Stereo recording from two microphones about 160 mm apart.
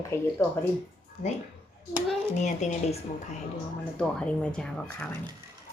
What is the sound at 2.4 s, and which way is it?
Speech, 45° left (ahead or behind).